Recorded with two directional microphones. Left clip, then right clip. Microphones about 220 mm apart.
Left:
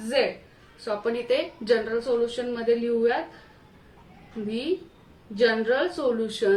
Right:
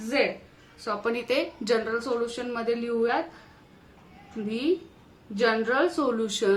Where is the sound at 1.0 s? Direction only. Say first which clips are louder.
Left 2 dB; 35° right (ahead or behind).